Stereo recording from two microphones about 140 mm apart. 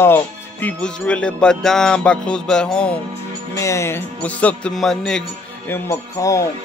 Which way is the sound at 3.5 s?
20° left (ahead or behind).